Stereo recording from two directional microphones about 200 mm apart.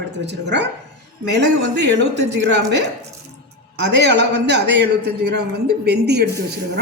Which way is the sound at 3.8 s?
55° right (ahead or behind).